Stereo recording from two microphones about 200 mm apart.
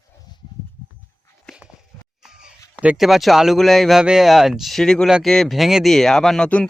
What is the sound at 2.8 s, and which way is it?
Speech, 5° right (ahead or behind).